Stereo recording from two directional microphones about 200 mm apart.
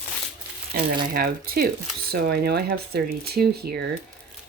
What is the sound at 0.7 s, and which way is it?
Speech, 45° right (ahead or behind).